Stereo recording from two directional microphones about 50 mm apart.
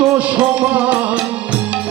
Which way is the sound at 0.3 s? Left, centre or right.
Right.